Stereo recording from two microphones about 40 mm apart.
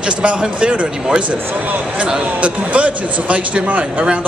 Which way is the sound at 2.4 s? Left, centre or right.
Right.